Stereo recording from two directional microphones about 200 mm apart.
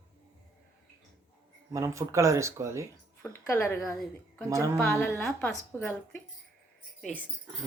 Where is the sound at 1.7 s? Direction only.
15° right (ahead or behind).